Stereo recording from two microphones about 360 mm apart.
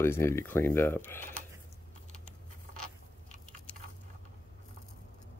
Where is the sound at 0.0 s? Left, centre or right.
Centre.